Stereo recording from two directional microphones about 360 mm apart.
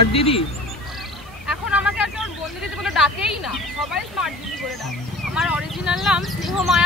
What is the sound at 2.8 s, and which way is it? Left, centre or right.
Speech, centre.